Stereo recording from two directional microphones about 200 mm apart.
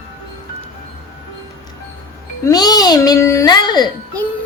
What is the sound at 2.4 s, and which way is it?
A child's voice, 20° left (ahead or behind).